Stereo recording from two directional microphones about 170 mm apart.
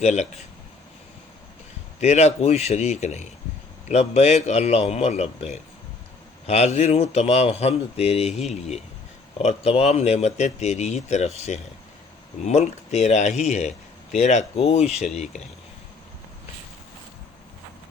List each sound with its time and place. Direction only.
0.0 s speech: 40° left (ahead or behind)
2.0 s speech: 40° left (ahead or behind)